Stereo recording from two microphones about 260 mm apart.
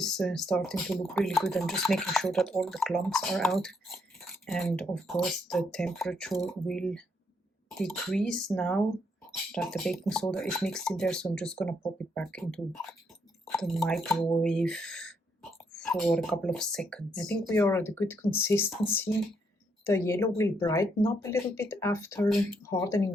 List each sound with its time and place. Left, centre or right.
0.0 s speech: centre